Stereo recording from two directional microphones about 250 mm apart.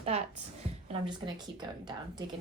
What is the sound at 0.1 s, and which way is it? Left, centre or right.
Speech, right.